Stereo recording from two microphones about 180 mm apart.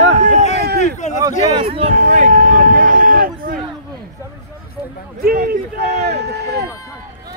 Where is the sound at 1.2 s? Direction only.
30° right (ahead or behind); by 3.5 s 50° right (ahead or behind).